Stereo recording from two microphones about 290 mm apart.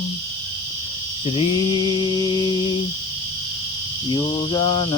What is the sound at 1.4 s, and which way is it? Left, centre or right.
Mantra, centre.